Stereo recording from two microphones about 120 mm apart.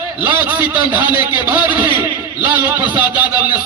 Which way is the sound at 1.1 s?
35° left (ahead or behind).